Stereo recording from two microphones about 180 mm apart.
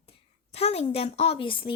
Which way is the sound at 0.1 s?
35° left (ahead or behind).